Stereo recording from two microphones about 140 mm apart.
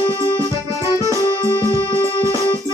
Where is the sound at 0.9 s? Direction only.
25° left (ahead or behind).